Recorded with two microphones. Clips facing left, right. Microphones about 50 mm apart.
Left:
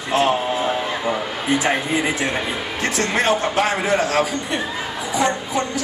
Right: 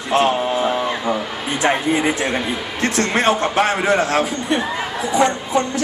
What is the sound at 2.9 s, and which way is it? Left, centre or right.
A man's voice, right.